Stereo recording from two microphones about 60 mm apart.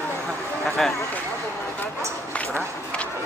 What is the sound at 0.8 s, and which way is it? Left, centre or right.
Speech, centre.